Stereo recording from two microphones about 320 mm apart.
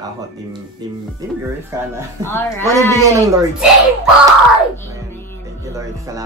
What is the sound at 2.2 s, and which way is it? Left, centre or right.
Speech, centre.